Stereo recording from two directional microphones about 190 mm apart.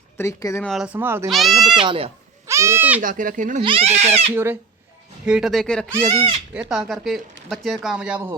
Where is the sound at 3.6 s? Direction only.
30° right (ahead or behind).